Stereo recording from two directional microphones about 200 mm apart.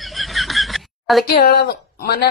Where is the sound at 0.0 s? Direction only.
Centre (ahead or behind).